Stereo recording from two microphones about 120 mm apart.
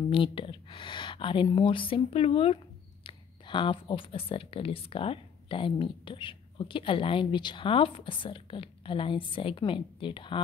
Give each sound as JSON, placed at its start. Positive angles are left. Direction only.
{"t": 0.1, "sound": "speech", "side_deg": 45}